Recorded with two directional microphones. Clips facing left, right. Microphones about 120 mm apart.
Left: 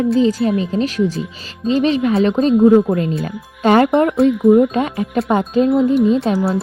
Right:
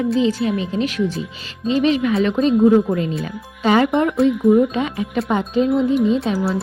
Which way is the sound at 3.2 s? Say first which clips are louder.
Left 3 dB; 50° left (ahead or behind).